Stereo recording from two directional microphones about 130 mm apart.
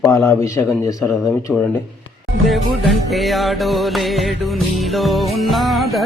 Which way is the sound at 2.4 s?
Centre (ahead or behind).